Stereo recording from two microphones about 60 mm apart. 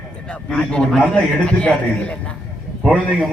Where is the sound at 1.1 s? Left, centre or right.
Left.